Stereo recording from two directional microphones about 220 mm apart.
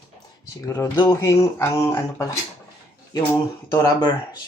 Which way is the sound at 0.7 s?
15° left (ahead or behind).